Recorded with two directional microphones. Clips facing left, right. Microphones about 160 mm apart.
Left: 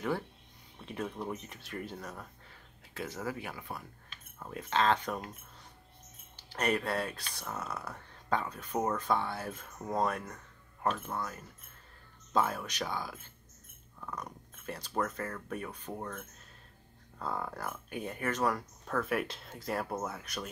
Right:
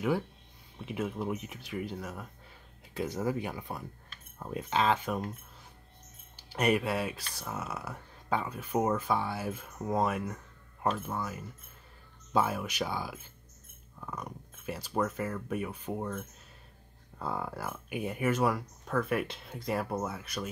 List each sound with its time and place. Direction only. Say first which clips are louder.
0.7 s speech: right 4 dB; 5° right (ahead or behind)
2.9 s speech: right 6 dB; 15° right (ahead or behind)
6.3 s speech: right 4 dB; 10° right (ahead or behind)